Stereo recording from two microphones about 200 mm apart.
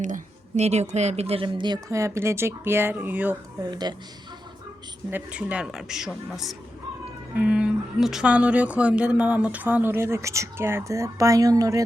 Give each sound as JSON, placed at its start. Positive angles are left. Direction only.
{"t": 0.0, "sound": "speech", "side_deg": -35}
{"t": 3.7, "sound": "speech", "side_deg": -20}
{"t": 5.1, "sound": "speech", "side_deg": -5}